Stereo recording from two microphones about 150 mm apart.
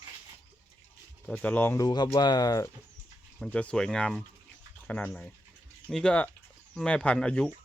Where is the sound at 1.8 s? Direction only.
30° left (ahead or behind).